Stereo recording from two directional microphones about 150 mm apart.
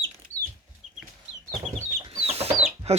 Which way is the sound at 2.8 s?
45° right (ahead or behind).